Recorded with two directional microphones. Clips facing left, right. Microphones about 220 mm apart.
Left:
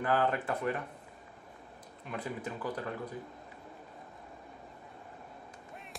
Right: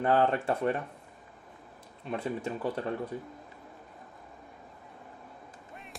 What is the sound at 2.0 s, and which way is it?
Speech, 25° right (ahead or behind).